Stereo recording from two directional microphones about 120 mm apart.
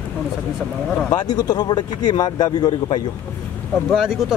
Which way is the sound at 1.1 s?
35° left (ahead or behind).